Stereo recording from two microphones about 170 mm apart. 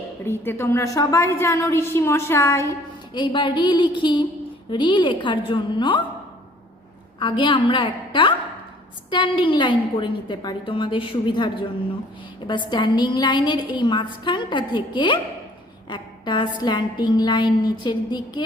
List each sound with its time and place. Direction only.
0.3 s a woman's voice: 15° left (ahead or behind)
3.2 s a woman's voice: 30° left (ahead or behind)
7.2 s a woman's voice: 30° left (ahead or behind)